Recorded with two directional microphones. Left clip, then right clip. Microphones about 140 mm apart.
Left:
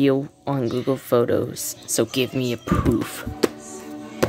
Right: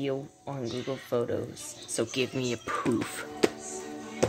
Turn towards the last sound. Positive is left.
turn(degrees=65)  # may be behind; listen again after turning